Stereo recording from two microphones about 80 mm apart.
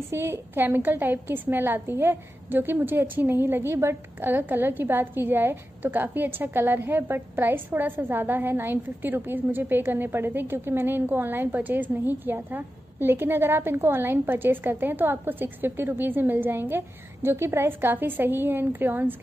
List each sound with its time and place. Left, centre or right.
0.1 s a woman's voice: right